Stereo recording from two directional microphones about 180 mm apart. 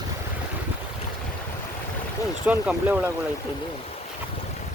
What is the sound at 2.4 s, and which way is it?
Speech, 10° right (ahead or behind).